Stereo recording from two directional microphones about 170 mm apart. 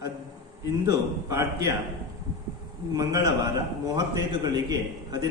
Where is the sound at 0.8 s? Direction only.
20° right (ahead or behind).